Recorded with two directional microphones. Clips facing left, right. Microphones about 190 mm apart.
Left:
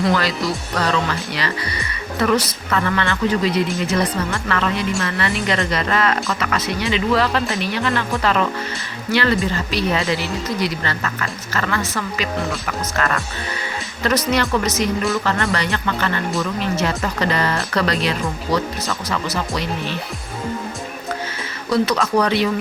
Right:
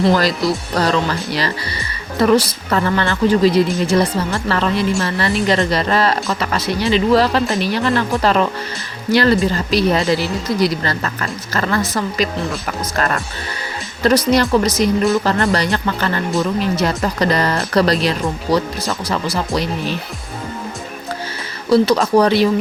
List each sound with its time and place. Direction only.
0.0 s speech: 40° right (ahead or behind)
21.7 s speech: 30° right (ahead or behind)